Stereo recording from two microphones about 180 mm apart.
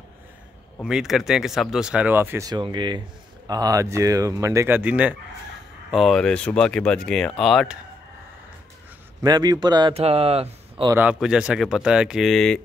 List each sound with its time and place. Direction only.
0.7 s speech: 5° right (ahead or behind)
9.2 s a man's voice: 25° right (ahead or behind)
9.9 s speech: 35° right (ahead or behind)
10.9 s speech: 10° right (ahead or behind)